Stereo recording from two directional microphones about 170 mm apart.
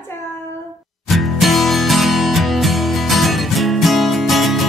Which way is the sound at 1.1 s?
Centre (ahead or behind).